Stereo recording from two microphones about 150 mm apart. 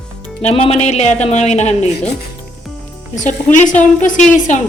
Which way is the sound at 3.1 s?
55° left (ahead or behind).